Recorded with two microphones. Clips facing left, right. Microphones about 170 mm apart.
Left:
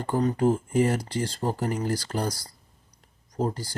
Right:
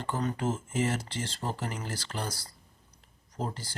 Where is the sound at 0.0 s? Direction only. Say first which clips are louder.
Left 8 dB; 35° left (ahead or behind).